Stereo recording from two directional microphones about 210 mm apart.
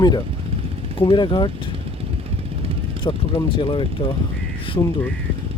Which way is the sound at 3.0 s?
25° left (ahead or behind).